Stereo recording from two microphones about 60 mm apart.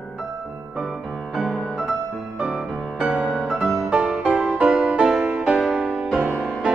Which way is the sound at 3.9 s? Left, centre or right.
Right.